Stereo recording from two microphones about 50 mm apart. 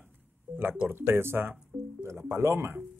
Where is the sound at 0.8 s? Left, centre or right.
Right.